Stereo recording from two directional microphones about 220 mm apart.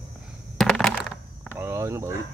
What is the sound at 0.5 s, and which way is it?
Crushing, centre (ahead or behind).